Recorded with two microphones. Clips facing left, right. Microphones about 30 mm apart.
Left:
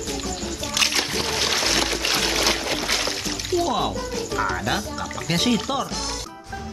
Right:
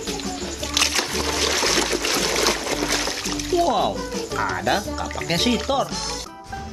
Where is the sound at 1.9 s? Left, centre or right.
Centre.